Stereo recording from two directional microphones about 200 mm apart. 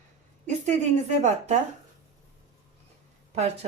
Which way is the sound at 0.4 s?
35° right (ahead or behind).